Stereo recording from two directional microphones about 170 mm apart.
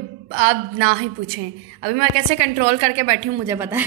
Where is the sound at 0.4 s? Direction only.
40° right (ahead or behind).